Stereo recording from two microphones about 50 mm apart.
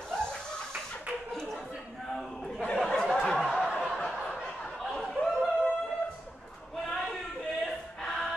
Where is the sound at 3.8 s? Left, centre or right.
Centre.